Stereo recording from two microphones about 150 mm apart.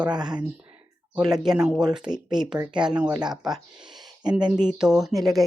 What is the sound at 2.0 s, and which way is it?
Speech, 30° right (ahead or behind).